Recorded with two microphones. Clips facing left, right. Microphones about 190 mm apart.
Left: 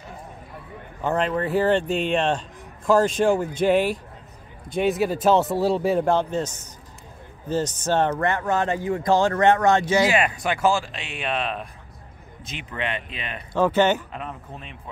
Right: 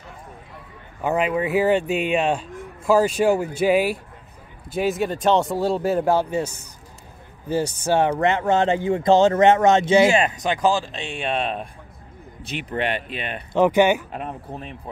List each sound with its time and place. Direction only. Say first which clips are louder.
1.0 s speech: right 2 dB; 10° right (ahead or behind); by 11.6 s 30° right (ahead or behind)
13.5 s speech: right 3 dB; 15° right (ahead or behind)
14.1 s speech: right 4 dB; 45° right (ahead or behind)